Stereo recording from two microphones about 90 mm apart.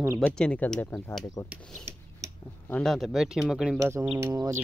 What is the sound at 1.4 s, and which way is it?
Speech, 35° left (ahead or behind).